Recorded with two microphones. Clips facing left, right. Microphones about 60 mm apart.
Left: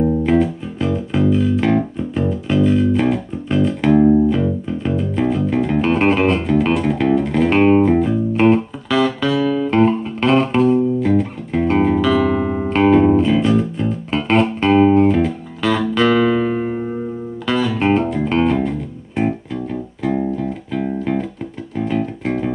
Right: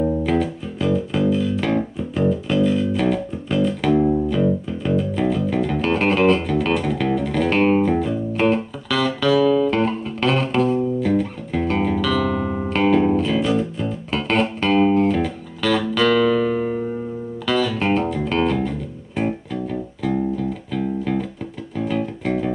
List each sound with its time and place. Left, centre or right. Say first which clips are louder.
0.3 s music: left 5 dB; centre